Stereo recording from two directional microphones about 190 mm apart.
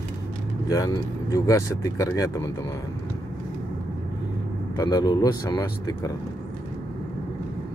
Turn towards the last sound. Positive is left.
turn(degrees=20)  # may be behind; listen again after turning